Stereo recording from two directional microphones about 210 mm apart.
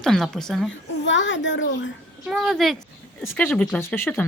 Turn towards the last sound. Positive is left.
turn(degrees=10)  # may be behind; listen again after turning